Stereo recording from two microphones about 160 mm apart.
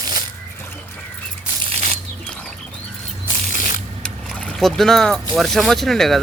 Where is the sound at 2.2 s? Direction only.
5° left (ahead or behind).